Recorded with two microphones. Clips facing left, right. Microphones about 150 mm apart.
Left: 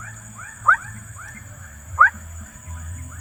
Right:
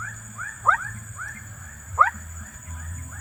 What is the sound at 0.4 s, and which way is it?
Wild animals, 15° left (ahead or behind).